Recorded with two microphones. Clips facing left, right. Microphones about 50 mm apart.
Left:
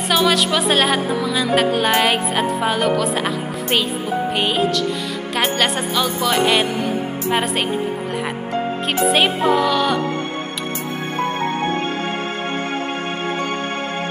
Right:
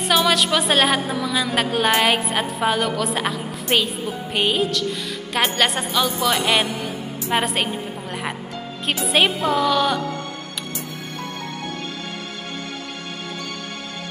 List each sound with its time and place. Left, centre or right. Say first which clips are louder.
0.1 s music: left 1 dB; centre
3.0 s speech: left 3 dB; centre
4.4 s music: right 1 dB; centre
9.0 s music: left 3 dB; centre